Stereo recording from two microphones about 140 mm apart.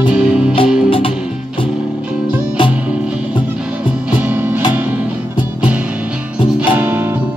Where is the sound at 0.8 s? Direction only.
40° left (ahead or behind).